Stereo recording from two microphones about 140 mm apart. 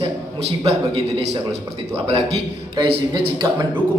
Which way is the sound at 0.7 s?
45° right (ahead or behind).